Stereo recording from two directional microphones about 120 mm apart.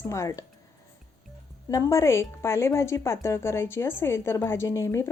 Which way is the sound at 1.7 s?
25° left (ahead or behind).